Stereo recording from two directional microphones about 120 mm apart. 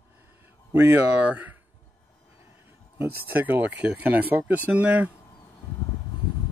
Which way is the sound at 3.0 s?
15° right (ahead or behind).